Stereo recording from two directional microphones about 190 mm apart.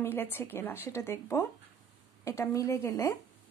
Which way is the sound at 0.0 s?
10° left (ahead or behind).